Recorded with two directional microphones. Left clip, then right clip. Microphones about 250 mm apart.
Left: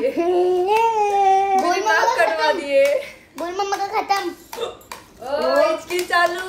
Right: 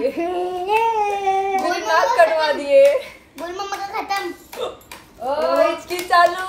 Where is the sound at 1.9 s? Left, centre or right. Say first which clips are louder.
Right 6 dB; centre.